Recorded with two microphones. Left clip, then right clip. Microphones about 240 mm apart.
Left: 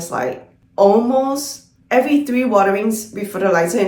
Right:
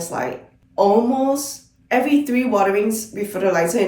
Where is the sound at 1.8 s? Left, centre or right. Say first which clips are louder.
Left 3 dB; centre.